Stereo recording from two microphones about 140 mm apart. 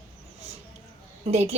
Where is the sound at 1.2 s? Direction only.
50° right (ahead or behind).